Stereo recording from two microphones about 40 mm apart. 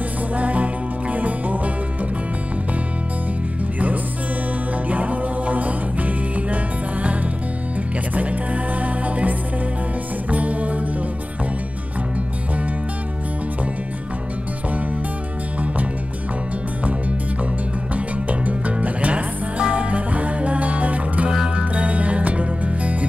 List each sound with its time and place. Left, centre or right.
0.4 s music: right
4.8 s music: right
10.3 s music: right
17.9 s music: right